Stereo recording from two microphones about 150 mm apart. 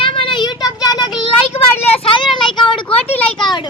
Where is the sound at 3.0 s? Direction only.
40° left (ahead or behind).